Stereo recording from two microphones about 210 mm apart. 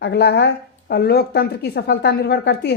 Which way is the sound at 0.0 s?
55° left (ahead or behind).